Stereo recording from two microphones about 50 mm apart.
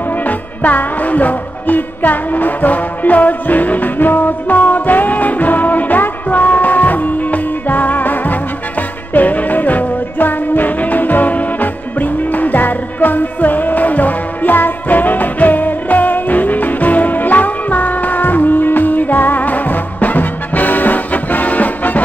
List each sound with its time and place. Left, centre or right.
0.2 s music: left